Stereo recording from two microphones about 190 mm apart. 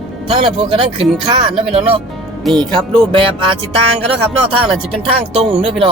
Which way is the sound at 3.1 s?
25° right (ahead or behind).